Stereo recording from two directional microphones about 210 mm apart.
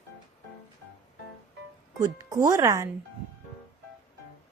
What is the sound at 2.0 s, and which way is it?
Speech, 15° right (ahead or behind).